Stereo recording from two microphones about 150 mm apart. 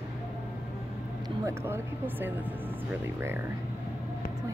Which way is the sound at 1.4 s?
15° right (ahead or behind).